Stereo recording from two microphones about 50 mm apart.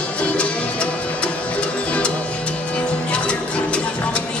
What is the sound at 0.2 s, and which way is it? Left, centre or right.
Music, left.